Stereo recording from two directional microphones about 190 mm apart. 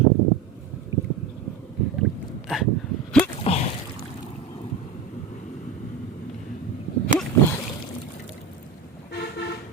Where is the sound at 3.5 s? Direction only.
30° left (ahead or behind).